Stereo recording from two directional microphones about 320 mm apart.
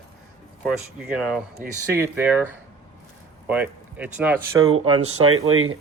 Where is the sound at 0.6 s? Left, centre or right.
Centre.